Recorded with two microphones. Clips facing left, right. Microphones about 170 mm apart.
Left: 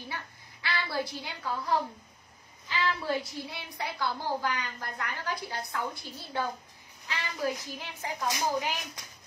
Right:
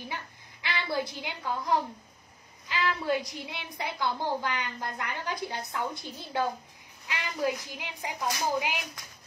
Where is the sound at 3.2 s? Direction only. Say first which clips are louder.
Even; 20° right (ahead or behind).